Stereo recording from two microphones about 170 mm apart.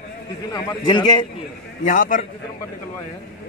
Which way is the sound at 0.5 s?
25° left (ahead or behind).